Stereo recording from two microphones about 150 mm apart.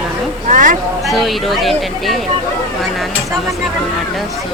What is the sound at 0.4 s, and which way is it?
Speech, 60° right (ahead or behind).